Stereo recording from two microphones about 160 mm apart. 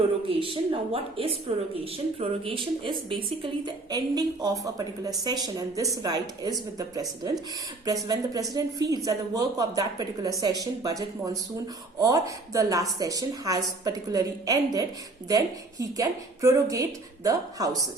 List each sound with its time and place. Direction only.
0.3 s a woman's voice: 35° right (ahead or behind)